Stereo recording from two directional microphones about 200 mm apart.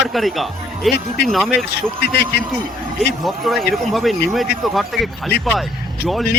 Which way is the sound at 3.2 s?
Centre (ahead or behind).